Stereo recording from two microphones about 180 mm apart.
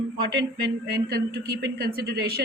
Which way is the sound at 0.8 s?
65° right (ahead or behind).